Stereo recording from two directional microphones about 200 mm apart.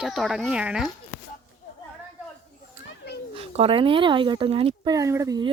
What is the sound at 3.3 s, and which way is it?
Speech, 30° right (ahead or behind).